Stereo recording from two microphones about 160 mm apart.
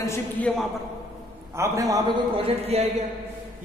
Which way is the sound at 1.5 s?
20° right (ahead or behind).